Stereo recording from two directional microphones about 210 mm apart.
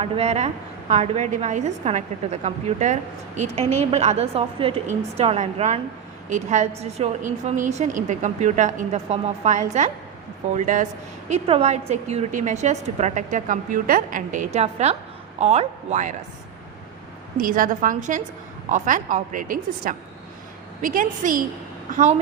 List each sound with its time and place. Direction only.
0.0 s a woman's voice: 30° right (ahead or behind)
17.3 s a woman's voice: 40° right (ahead or behind)